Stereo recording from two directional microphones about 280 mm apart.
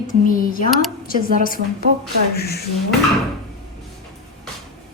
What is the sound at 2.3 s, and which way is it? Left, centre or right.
Speech, left.